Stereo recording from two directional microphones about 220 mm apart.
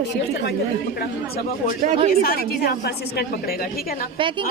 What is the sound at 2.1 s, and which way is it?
A woman's voice, 45° left (ahead or behind).